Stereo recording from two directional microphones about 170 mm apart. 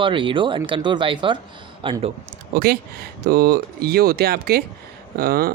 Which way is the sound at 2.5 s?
60° right (ahead or behind).